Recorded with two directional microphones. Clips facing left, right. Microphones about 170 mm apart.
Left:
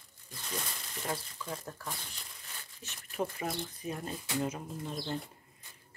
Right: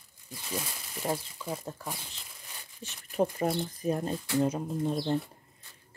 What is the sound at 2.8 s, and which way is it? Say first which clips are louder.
Speech: right 7 dB; 35° right (ahead or behind).